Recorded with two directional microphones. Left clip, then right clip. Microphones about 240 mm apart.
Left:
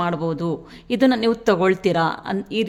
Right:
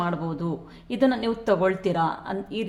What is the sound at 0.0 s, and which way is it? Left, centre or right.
Speech, left.